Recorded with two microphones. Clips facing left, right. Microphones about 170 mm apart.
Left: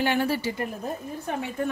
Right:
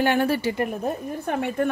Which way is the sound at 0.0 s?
55° right (ahead or behind).